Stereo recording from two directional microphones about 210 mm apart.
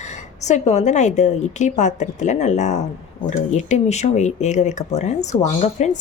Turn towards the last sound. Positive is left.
turn(degrees=35)  # may be behind; listen again after turning